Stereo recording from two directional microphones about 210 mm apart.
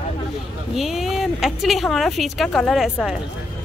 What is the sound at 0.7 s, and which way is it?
Speech, centre (ahead or behind).